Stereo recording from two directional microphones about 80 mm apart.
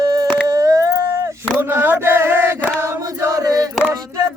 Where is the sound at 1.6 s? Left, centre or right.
Right.